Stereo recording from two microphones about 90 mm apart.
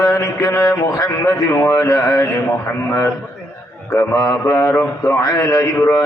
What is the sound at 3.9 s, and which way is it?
A man's voice, 45° left (ahead or behind).